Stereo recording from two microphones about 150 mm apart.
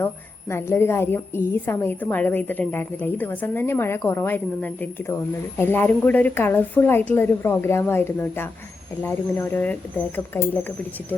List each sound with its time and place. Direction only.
0.5 s a woman's voice: 15° left (ahead or behind)